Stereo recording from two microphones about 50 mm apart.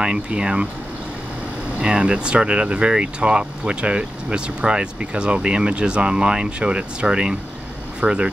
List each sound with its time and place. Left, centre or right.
0.0 s speech: centre
1.8 s speech: right